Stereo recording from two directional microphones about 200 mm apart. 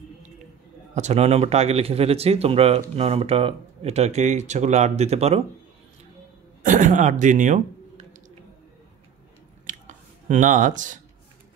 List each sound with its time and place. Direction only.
0.9 s speech: 35° right (ahead or behind)
6.6 s speech: 40° right (ahead or behind)
9.7 s a sound: 40° right (ahead or behind)